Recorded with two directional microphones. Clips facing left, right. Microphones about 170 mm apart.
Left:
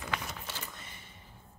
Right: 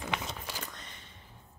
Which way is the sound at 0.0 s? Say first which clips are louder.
Right 2 dB; 20° right (ahead or behind).